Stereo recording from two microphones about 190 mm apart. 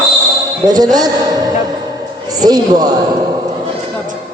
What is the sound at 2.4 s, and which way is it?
Speech, 20° right (ahead or behind).